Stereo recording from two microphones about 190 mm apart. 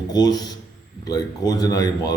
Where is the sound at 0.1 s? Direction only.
20° left (ahead or behind).